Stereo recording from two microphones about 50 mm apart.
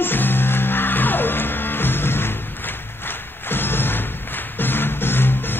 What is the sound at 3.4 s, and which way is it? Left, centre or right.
Music, left.